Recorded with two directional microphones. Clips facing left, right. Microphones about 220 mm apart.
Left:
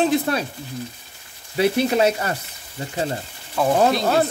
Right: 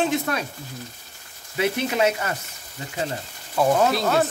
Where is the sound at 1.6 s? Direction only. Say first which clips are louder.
Left 4 dB; 35° left (ahead or behind).